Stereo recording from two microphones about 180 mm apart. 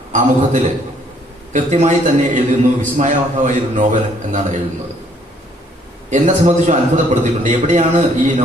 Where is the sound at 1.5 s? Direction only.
45° right (ahead or behind).